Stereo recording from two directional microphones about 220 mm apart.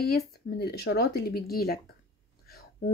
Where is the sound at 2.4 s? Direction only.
45° left (ahead or behind).